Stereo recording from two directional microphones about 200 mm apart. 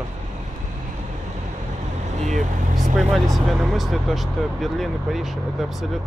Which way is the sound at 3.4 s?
Centre (ahead or behind).